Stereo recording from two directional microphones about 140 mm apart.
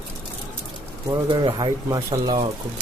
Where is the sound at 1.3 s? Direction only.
35° right (ahead or behind).